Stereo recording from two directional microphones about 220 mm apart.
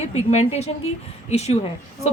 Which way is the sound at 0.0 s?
30° left (ahead or behind).